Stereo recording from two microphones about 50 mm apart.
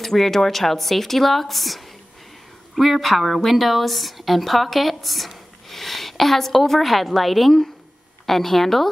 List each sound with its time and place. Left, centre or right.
0.0 s speech: centre